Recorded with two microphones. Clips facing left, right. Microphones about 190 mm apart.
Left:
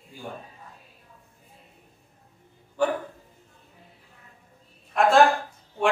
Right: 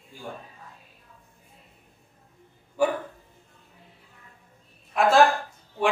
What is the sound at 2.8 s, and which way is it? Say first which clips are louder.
Speech: right 1 dB; 10° right (ahead or behind).